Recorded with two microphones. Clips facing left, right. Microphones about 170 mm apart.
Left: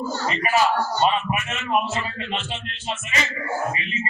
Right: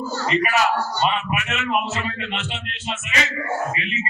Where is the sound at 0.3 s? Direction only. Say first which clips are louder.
Right 1 dB; 70° right (ahead or behind).